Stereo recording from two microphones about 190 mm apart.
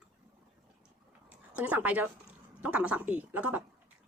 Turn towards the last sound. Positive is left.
turn(degrees=-10)  # may be behind; listen again after turning